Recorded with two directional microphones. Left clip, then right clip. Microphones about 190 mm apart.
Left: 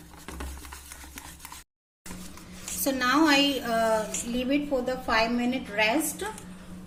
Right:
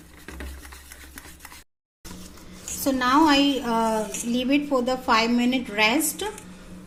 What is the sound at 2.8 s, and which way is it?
A woman's voice, 30° right (ahead or behind).